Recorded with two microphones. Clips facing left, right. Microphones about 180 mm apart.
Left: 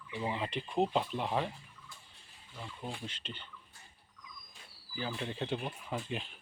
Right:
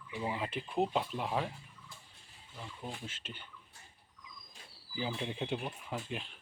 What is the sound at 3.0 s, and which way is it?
Speech, 5° right (ahead or behind).